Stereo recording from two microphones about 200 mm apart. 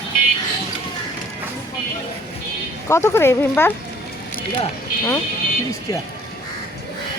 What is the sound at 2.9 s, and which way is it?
Speech, 15° left (ahead or behind).